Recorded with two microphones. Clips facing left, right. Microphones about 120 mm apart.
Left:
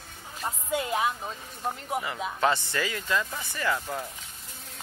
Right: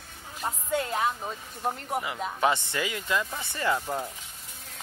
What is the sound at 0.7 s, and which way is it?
Speech, 10° left (ahead or behind).